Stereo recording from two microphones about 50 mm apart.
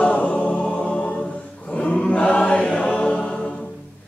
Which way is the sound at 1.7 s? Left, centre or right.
Left.